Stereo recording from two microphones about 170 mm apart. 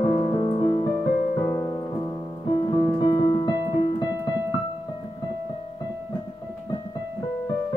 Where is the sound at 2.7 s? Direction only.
30° left (ahead or behind).